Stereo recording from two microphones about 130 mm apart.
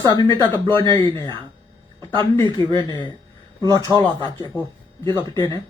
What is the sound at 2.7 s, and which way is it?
Speech, 35° left (ahead or behind).